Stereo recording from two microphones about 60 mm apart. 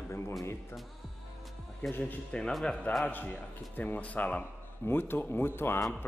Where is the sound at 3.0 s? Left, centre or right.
Left.